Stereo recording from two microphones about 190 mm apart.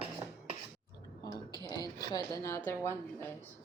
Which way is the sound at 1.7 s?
20° left (ahead or behind).